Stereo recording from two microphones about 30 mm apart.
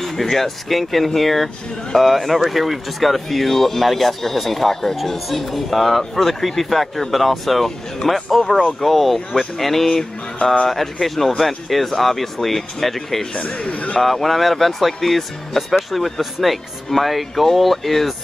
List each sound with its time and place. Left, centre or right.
0.0 s speech: centre
13.3 s speech: left
14.0 s speech: centre